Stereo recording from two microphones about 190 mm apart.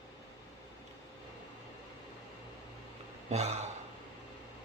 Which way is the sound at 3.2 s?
35° right (ahead or behind).